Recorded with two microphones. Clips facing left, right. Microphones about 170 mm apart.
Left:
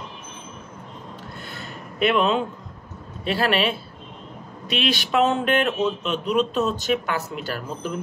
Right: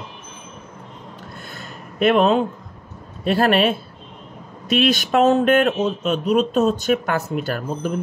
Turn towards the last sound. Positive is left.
turn(degrees=-50)  # may be behind; listen again after turning